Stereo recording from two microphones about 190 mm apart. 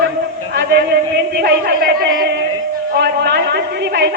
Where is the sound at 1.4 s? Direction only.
55° right (ahead or behind).